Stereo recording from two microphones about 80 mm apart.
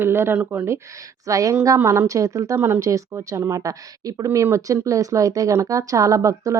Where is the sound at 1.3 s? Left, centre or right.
Right.